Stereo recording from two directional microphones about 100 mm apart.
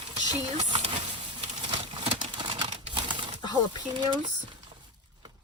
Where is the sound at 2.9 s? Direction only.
50° right (ahead or behind).